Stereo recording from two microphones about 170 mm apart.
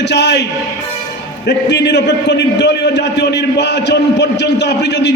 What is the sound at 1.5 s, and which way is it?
A man's voice, 85° left.